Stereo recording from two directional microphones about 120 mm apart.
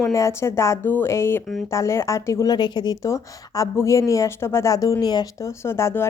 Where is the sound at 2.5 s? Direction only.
35° left (ahead or behind).